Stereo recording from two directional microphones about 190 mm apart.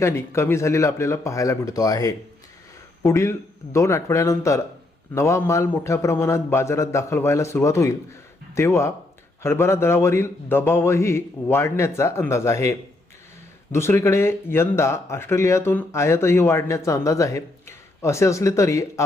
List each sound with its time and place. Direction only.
0.0 s speech: 15° left (ahead or behind)
13.7 s speech: 15° left (ahead or behind)